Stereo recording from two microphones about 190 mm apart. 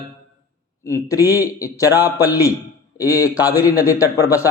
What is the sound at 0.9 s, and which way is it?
A man's voice, 15° left (ahead or behind).